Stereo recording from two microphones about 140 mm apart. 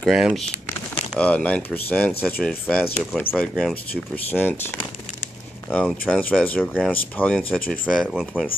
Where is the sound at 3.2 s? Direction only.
15° left (ahead or behind).